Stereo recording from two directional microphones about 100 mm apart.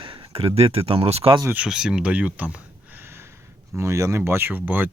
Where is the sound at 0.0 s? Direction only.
60° right (ahead or behind); by 1.4 s 75° right (ahead or behind).